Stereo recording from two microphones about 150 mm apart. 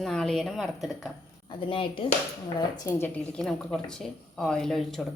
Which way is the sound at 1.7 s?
35° left (ahead or behind).